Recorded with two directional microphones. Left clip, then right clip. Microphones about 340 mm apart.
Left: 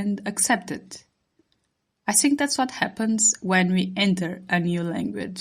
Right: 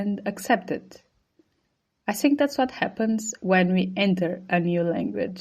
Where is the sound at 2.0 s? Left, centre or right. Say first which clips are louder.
Even; left.